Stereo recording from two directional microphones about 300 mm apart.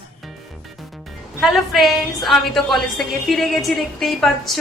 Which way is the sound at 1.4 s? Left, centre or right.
Centre.